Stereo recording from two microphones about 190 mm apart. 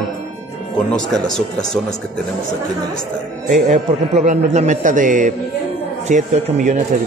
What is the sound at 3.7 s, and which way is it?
Speech, 35° right (ahead or behind).